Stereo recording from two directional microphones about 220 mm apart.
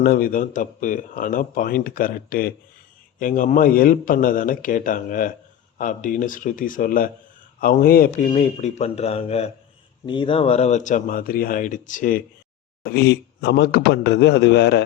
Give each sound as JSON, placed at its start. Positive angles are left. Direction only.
{"t": 0.0, "sound": "speech", "side_deg": 40}